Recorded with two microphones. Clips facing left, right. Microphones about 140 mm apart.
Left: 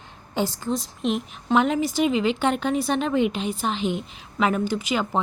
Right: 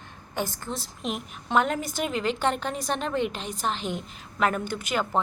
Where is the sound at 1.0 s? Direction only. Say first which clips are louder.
Left 7 dB; centre (ahead or behind).